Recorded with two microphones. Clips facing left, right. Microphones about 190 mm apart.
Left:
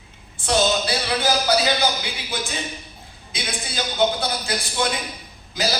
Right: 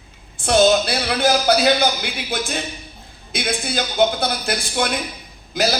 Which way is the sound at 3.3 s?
55° right (ahead or behind).